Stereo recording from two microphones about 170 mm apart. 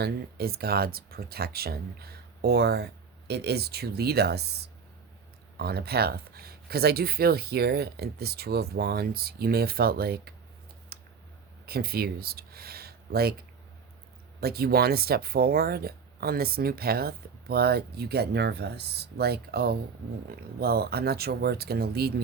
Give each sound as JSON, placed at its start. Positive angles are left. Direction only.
{"t": 0.0, "sound": "speech", "side_deg": -65}
{"t": 10.9, "sound": "a sound", "side_deg": -70}
{"t": 11.6, "sound": "speech", "side_deg": -65}
{"t": 14.4, "sound": "speech", "side_deg": -65}